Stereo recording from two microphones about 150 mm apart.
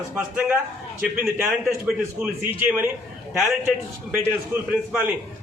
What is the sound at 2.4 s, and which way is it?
Speech, 10° right (ahead or behind).